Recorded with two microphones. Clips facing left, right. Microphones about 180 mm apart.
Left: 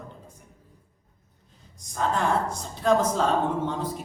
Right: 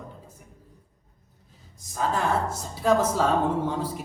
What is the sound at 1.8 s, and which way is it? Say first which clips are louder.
A woman's voice: even; 5° right (ahead or behind).